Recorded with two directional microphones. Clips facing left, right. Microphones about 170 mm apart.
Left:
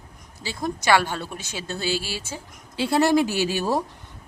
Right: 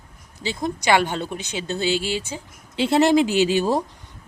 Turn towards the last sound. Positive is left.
turn(degrees=-20)  # may be behind; listen again after turning